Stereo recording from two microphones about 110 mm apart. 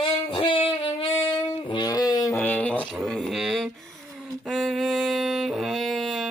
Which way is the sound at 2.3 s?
15° left (ahead or behind).